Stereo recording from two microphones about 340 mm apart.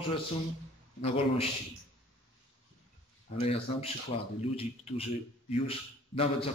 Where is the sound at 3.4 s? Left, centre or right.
Centre.